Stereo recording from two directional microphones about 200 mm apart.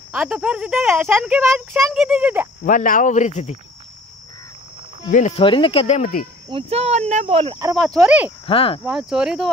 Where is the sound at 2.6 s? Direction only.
40° left (ahead or behind).